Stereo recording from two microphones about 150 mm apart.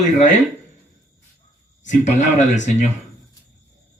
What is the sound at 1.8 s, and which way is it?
Speech, 55° left (ahead or behind).